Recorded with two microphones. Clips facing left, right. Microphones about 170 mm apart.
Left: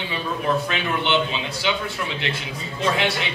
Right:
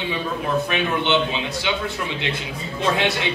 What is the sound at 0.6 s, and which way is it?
A man's voice, 20° right (ahead or behind).